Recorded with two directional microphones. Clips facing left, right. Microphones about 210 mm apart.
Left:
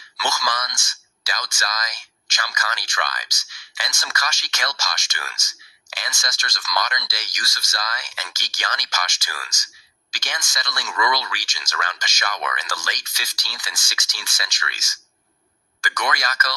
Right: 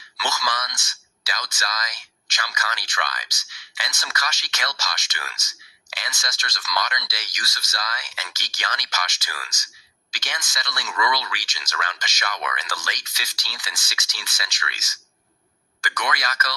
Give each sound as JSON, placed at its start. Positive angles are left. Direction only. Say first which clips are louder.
{"t": 0.2, "sound": "speech", "louder": "left 2 dB", "side_deg": 45}